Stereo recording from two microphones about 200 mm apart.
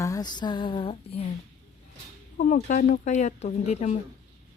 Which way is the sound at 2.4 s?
40° left (ahead or behind).